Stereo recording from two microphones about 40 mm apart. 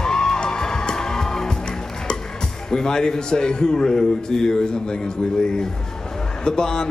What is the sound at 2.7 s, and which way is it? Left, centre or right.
A man's voice, centre.